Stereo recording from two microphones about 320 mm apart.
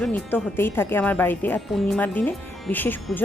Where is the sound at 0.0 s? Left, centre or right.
Centre.